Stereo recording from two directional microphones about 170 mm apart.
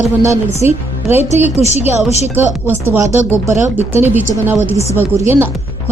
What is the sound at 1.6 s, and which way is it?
Speech, 40° left (ahead or behind).